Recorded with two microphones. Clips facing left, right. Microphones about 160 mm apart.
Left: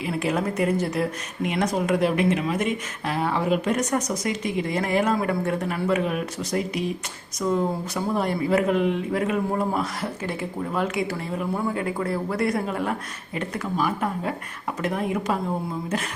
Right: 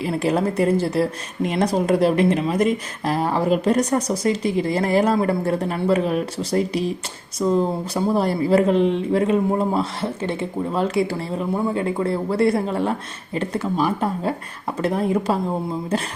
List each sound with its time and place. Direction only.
0.0 s a woman's voice: 35° right (ahead or behind)